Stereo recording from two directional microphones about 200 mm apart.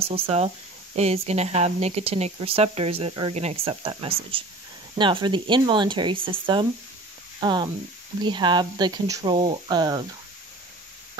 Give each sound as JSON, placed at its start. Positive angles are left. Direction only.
{"t": 0.0, "sound": "speech", "side_deg": -30}